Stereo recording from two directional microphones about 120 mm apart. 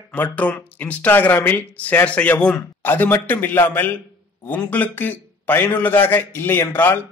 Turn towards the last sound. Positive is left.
turn(degrees=15)  # may be behind; listen again after turning